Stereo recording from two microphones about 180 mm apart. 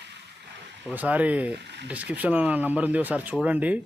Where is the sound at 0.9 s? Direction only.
10° right (ahead or behind).